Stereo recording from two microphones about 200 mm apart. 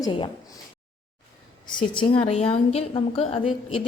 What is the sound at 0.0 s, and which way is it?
Speech, 25° left (ahead or behind).